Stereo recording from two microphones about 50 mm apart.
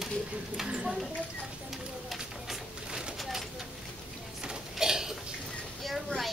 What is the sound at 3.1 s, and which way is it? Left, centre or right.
Vehicle, centre.